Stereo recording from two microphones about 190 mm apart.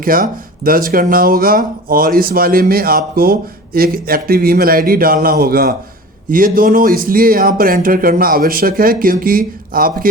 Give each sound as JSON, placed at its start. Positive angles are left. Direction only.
{"t": 0.0, "sound": "speech", "side_deg": -50}